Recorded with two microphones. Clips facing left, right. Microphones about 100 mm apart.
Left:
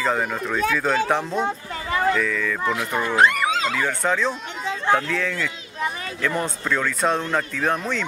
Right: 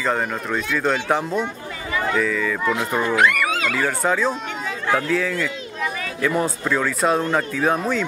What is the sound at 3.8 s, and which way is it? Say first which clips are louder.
Speech: right 2 dB; 5° right (ahead or behind).